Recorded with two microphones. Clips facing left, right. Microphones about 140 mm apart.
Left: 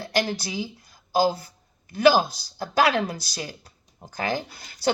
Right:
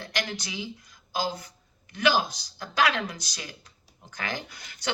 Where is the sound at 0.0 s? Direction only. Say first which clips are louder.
Left 7 dB; 35° left (ahead or behind).